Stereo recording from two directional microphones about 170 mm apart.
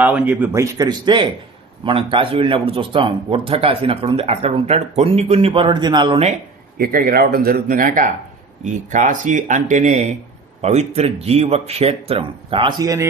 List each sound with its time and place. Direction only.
0.0 s a man's voice: 10° right (ahead or behind); by 6.3 s 30° right (ahead or behind)
6.8 s speech: 60° right (ahead or behind); by 13.1 s 20° right (ahead or behind)